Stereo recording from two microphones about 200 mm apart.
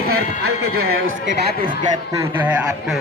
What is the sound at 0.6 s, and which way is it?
Speech, 90° right.